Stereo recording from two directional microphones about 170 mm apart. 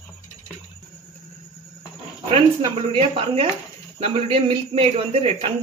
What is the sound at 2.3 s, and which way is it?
Speech, 30° right (ahead or behind).